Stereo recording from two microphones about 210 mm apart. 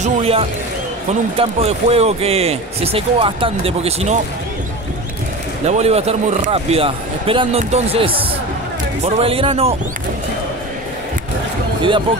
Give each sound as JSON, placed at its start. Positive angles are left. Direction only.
{"t": 0.0, "sound": "speech", "side_deg": -30}
{"t": 5.7, "sound": "speech", "side_deg": -30}